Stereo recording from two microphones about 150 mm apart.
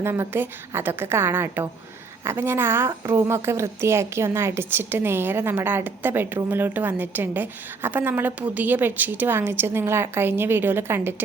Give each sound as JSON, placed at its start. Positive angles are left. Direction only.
{"t": 0.0, "sound": "a woman's voice", "side_deg": -15}